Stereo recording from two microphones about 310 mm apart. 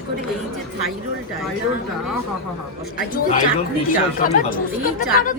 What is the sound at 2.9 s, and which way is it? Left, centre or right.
Speech, left.